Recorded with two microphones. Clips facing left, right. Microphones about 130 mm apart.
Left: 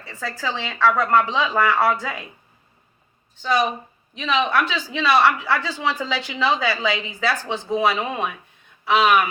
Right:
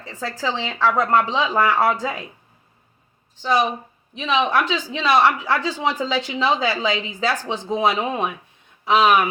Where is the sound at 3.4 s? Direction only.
15° right (ahead or behind).